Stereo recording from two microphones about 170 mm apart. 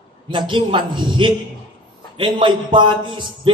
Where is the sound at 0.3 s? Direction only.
30° right (ahead or behind).